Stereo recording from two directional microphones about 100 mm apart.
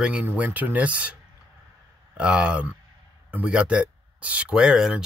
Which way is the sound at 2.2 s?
10° right (ahead or behind).